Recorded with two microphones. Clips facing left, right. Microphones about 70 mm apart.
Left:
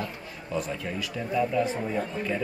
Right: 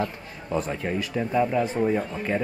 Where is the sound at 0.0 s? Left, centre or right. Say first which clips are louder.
Right 5 dB; right.